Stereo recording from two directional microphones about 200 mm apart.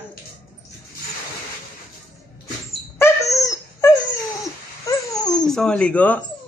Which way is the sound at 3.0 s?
15° left (ahead or behind).